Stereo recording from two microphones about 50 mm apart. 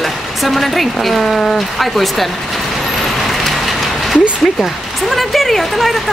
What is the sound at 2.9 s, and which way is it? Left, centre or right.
Vehicle, centre.